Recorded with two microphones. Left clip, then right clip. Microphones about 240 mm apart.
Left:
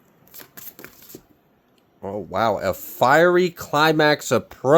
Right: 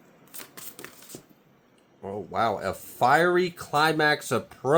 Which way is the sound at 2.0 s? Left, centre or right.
Left.